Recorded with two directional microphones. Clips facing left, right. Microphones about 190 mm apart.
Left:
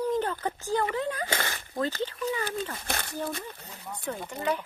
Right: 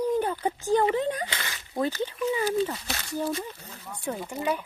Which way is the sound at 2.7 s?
55° left (ahead or behind).